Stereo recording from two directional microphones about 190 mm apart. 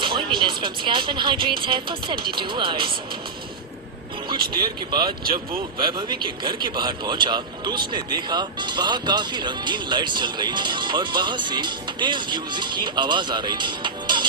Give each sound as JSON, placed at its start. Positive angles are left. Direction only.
{"t": 0.0, "sound": "speech", "side_deg": -25}
{"t": 4.5, "sound": "speech", "side_deg": -25}